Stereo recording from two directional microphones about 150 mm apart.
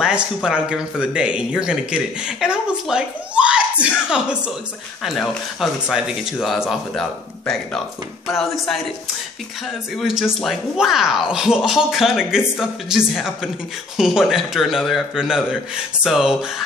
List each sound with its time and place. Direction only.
0.0 s speech: 5° right (ahead or behind)
9.9 s speech: 5° right (ahead or behind)